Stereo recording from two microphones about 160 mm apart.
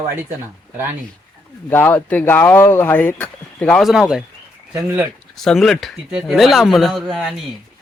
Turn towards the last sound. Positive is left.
turn(degrees=0)  # may be behind; listen again after turning